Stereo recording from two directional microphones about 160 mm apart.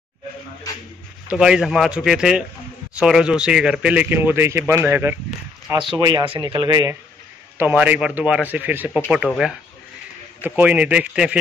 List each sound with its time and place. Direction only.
1.3 s speech: 5° right (ahead or behind)
5.9 s speech: 25° right (ahead or behind)
7.5 s speech: 10° right (ahead or behind)